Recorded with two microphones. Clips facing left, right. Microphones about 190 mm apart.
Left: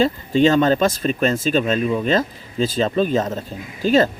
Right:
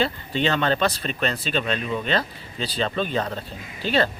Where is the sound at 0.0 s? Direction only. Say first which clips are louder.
Left 8 dB; 40° left (ahead or behind).